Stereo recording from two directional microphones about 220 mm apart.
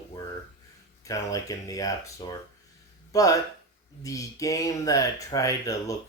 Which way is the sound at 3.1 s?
15° left (ahead or behind).